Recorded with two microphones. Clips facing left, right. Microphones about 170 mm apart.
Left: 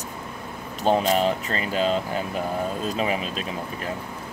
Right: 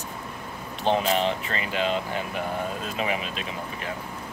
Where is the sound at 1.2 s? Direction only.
40° left (ahead or behind).